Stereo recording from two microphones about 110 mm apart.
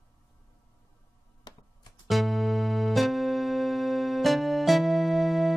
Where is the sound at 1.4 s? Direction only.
40° left (ahead or behind).